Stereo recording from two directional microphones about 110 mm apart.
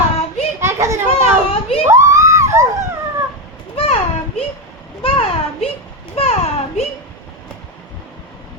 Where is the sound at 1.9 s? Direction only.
30° right (ahead or behind).